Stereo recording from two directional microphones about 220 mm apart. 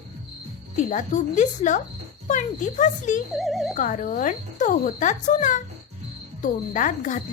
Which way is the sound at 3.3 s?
Centre (ahead or behind).